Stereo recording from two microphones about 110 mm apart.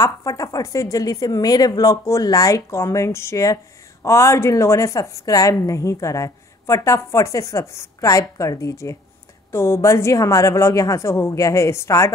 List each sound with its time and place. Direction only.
0.0 s a woman's voice: 30° left (ahead or behind)